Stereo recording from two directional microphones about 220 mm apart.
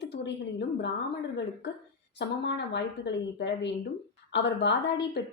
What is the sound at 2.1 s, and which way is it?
A woman's voice, 50° left (ahead or behind).